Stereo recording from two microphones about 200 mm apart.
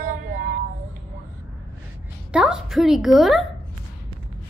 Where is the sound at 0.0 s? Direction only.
40° right (ahead or behind).